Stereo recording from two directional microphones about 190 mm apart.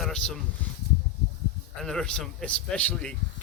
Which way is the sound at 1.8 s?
5° left (ahead or behind).